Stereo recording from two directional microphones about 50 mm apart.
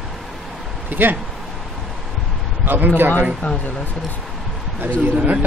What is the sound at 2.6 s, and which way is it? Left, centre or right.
Speech, right.